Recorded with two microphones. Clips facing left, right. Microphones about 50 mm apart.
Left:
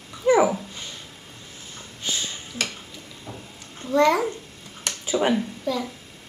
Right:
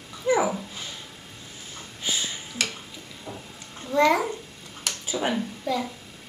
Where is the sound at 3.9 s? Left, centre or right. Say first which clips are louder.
Left 2 dB; centre.